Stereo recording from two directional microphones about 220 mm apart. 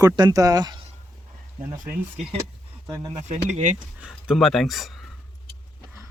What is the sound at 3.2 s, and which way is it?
Speech, 35° right (ahead or behind).